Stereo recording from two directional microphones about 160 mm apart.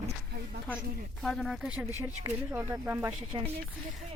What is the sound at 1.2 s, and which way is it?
Speech, centre (ahead or behind).